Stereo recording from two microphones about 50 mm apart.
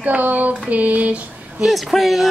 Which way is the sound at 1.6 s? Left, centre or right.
Centre.